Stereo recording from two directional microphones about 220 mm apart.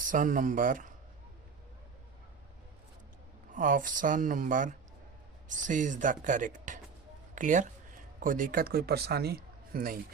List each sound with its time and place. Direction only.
0.0 s speech: 35° right (ahead or behind)
3.5 s speech: 40° right (ahead or behind)